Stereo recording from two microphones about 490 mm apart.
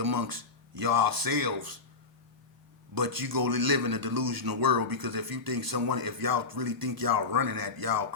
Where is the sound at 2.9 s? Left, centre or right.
Right.